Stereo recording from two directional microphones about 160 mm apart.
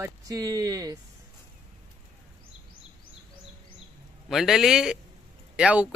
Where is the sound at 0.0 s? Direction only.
20° right (ahead or behind).